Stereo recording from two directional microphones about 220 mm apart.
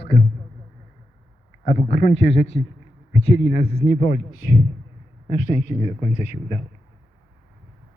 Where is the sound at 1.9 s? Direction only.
50° left (ahead or behind); by 4.2 s 35° left (ahead or behind).